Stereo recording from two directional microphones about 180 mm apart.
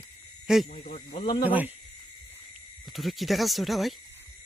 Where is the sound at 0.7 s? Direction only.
50° left (ahead or behind).